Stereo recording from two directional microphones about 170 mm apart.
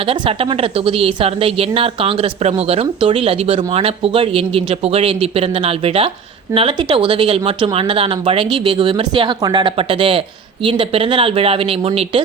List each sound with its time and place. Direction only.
0.0 s a woman's voice: 35° right (ahead or behind)